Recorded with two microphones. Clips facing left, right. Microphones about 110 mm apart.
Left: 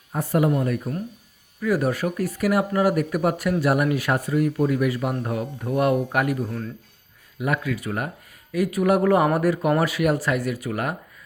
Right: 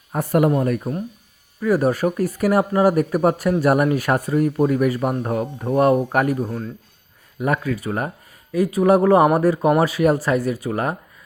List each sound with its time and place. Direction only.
0.1 s speech: 55° right (ahead or behind)
1.6 s speech: 40° right (ahead or behind)